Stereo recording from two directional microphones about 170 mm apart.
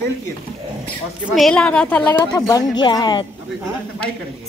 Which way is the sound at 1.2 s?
Centre (ahead or behind).